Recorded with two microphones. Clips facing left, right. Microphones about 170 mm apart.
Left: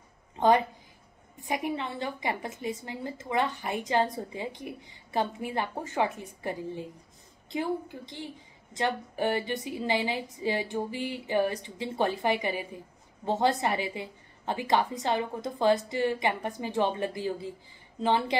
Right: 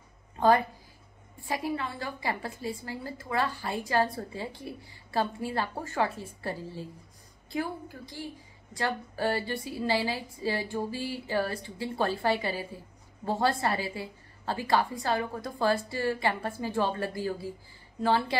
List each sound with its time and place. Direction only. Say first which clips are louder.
0.4 s a woman's voice: even; 20° left (ahead or behind)